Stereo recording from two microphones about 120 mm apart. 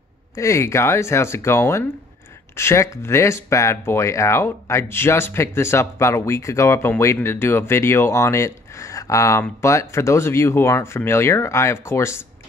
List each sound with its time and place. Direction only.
0.4 s speech: 25° left (ahead or behind)